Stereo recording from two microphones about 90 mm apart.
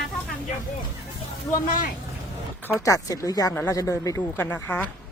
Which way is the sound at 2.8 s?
40° left (ahead or behind).